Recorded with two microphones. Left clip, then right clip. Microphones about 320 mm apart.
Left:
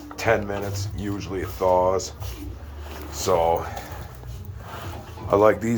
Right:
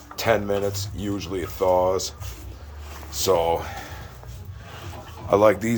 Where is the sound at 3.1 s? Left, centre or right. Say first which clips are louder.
Even; centre.